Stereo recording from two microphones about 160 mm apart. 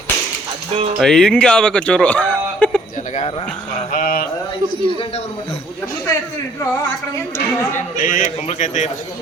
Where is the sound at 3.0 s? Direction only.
50° left (ahead or behind).